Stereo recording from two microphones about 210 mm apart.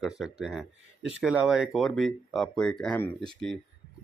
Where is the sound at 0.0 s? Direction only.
5° right (ahead or behind).